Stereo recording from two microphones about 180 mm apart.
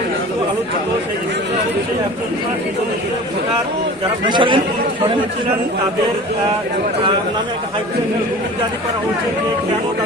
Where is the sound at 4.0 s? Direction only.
25° right (ahead or behind).